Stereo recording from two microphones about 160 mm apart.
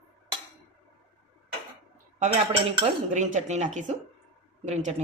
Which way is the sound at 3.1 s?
50° right (ahead or behind).